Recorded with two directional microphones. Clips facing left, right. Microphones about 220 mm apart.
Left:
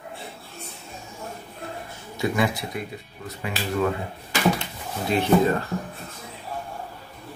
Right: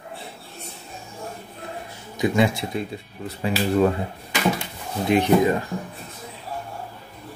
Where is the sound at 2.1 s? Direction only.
20° right (ahead or behind).